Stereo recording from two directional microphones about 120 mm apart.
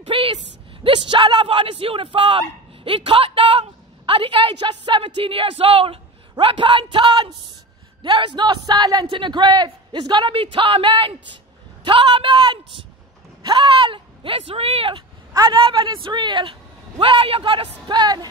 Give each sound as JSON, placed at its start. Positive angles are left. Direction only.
{"t": 0.0, "sound": "a sound", "side_deg": -50}
{"t": 0.8, "sound": "a man's voice", "side_deg": -40}
{"t": 9.0, "sound": "speech", "side_deg": -45}
{"t": 15.3, "sound": "a man's voice", "side_deg": -40}